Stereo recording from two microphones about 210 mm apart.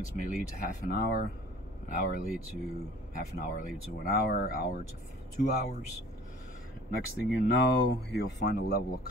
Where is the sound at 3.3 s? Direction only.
40° left (ahead or behind).